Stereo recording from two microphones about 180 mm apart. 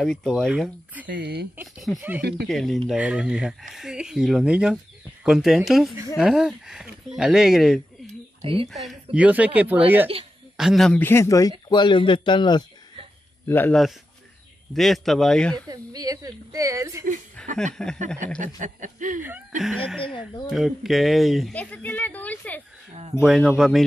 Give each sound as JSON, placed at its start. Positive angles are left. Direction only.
{"t": 0.0, "sound": "speech", "side_deg": 0}
{"t": 1.0, "sound": "speech", "side_deg": -70}
{"t": 1.6, "sound": "speech", "side_deg": -5}
{"t": 8.1, "sound": "a sound", "side_deg": -35}
{"t": 8.6, "sound": "speech", "side_deg": 0}
{"t": 10.6, "sound": "speech", "side_deg": 0}
{"t": 13.5, "sound": "speech", "side_deg": 10}
{"t": 14.7, "sound": "speech", "side_deg": 0}
{"t": 15.7, "sound": "a woman's voice", "side_deg": -20}
{"t": 17.4, "sound": "a sound", "side_deg": 5}
{"t": 17.8, "sound": "speech", "side_deg": 5}
{"t": 18.4, "sound": "speech", "side_deg": -45}
{"t": 19.6, "sound": "speech", "side_deg": 0}
{"t": 23.2, "sound": "speech", "side_deg": -5}